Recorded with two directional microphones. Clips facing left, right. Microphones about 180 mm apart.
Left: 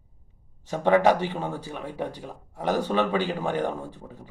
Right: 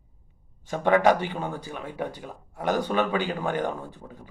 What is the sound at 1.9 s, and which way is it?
Speech, 5° right (ahead or behind).